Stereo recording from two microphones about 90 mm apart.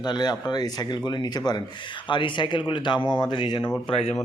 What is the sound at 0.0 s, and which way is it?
Speech, 50° left (ahead or behind).